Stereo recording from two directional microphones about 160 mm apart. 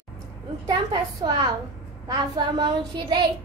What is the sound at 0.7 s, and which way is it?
A woman's voice, 25° right (ahead or behind).